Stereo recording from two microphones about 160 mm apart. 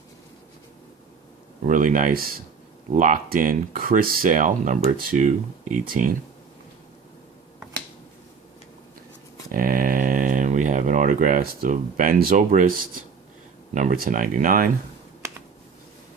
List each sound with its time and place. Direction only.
1.6 s speech: 55° right (ahead or behind)
9.5 s speech: 60° right (ahead or behind)
13.7 s speech: 60° right (ahead or behind)
15.2 s a sound: 15° right (ahead or behind)